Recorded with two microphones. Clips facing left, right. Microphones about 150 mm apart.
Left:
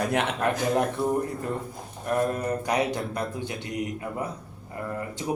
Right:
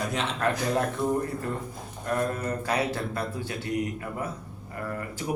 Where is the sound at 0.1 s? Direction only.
60° left (ahead or behind).